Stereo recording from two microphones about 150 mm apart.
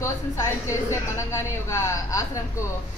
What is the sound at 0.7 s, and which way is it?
A woman's voice, 20° left (ahead or behind).